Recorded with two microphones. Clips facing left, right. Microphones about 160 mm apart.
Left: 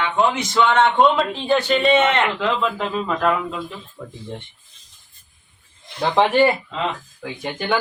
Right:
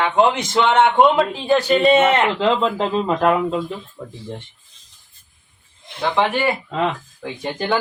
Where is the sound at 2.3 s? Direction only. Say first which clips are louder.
Right 4 dB; 25° right (ahead or behind).